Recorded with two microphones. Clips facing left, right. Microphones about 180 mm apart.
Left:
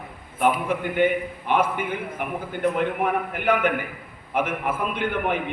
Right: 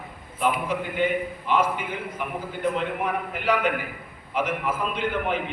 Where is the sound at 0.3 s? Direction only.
55° left (ahead or behind).